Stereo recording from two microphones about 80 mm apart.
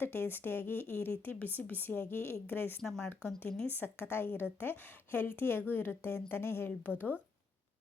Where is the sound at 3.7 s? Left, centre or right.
Left.